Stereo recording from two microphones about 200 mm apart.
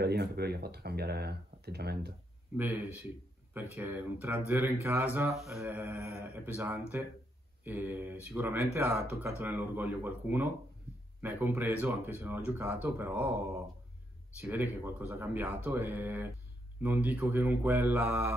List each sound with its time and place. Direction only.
0.0 s speech: 55° right (ahead or behind)
2.5 s speech: 10° right (ahead or behind)
5.6 s speech: 10° right (ahead or behind)